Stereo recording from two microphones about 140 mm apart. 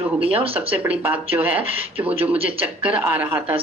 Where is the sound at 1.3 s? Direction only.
25° right (ahead or behind).